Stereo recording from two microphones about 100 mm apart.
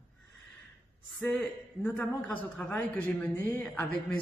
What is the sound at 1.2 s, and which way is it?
A man's voice, 20° left (ahead or behind).